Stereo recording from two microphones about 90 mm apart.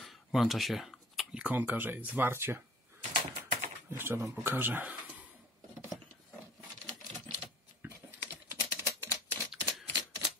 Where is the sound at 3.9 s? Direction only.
25° right (ahead or behind).